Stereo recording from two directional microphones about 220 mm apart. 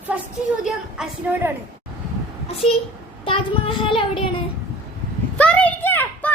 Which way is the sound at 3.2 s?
25° left (ahead or behind).